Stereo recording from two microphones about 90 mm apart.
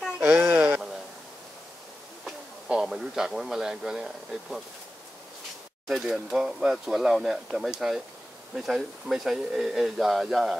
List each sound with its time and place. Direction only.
0.4 s sheep: 15° right (ahead or behind)
2.2 s a man's voice: 5° right (ahead or behind)
5.9 s speech: 5° right (ahead or behind)